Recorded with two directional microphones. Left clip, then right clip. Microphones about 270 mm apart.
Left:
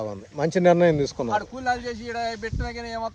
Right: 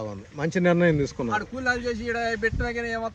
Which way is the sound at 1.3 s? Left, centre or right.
Centre.